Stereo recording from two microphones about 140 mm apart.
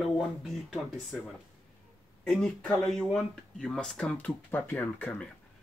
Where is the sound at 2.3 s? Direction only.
5° left (ahead or behind).